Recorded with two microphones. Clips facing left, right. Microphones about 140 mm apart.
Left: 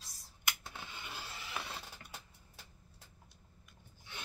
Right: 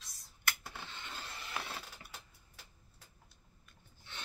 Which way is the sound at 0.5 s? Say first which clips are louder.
Right 1 dB; 10° left (ahead or behind).